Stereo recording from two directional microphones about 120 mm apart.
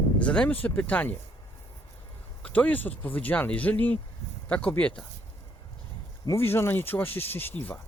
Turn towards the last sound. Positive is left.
turn(degrees=15)  # may be behind; listen again after turning